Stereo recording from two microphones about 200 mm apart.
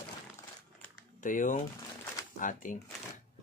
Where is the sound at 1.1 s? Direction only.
40° left (ahead or behind).